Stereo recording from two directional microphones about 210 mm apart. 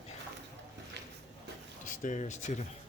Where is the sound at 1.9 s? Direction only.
35° left (ahead or behind).